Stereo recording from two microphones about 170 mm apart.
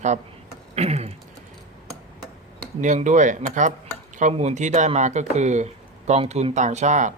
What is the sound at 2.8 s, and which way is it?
Speech, 45° right (ahead or behind).